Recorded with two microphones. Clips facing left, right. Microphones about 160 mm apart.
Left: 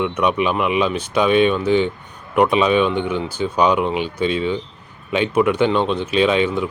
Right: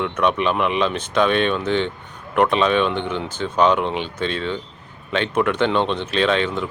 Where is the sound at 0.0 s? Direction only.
10° left (ahead or behind).